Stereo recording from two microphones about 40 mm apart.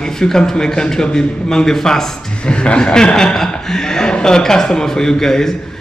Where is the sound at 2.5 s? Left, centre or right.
Left.